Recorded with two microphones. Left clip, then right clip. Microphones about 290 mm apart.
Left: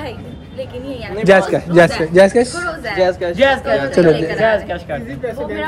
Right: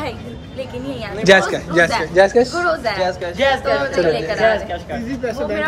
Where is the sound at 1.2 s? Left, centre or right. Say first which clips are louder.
Left 1 dB; centre.